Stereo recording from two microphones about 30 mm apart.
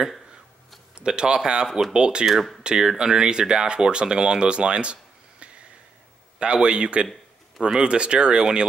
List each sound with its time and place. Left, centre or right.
0.9 s speech: right
2.2 s speech: centre
2.6 s speech: right
6.4 s speech: right